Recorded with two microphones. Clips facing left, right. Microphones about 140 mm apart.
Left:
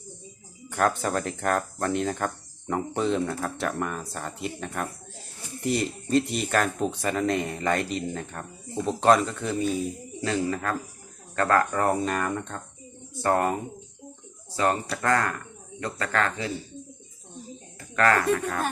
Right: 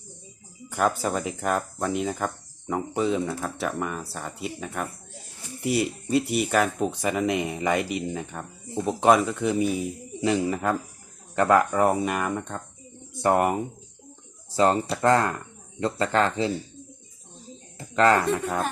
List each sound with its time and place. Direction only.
0.7 s speech: 5° right (ahead or behind); by 16.5 s 25° right (ahead or behind)
17.7 s cricket: 25° right (ahead or behind)
18.3 s speech: 25° right (ahead or behind)